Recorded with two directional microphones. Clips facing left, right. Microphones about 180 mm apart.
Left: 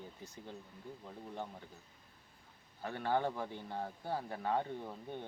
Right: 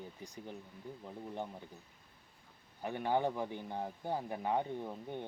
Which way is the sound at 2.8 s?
15° right (ahead or behind).